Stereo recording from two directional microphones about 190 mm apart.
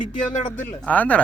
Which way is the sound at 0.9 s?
5° left (ahead or behind).